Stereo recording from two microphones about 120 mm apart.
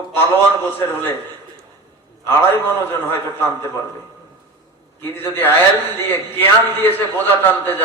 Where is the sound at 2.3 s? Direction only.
15° left (ahead or behind).